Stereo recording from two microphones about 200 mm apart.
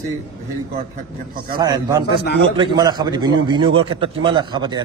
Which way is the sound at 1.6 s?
20° right (ahead or behind).